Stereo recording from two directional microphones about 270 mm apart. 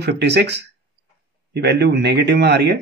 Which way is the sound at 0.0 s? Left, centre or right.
Right.